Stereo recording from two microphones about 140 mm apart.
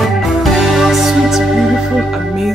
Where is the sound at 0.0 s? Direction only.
Centre (ahead or behind).